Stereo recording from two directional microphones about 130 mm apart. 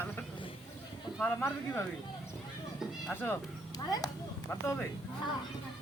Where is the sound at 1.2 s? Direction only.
15° left (ahead or behind).